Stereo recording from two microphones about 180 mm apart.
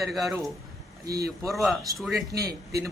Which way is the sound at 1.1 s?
60° right (ahead or behind).